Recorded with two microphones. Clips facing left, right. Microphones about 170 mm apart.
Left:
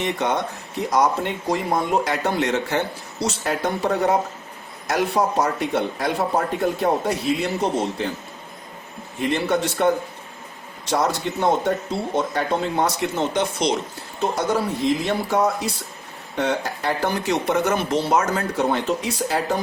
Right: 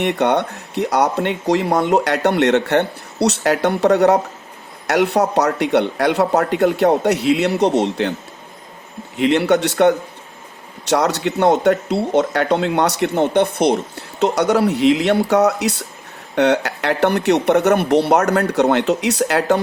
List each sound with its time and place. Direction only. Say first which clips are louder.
0.0 s speech: right 6 dB; 65° right (ahead or behind)
9.1 s speech: right 7 dB; 75° right (ahead or behind); by 13.7 s 60° right (ahead or behind)
14.2 s speech: right 6 dB; 75° right (ahead or behind)